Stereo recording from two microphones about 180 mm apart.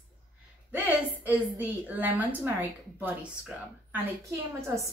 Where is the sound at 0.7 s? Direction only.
10° right (ahead or behind).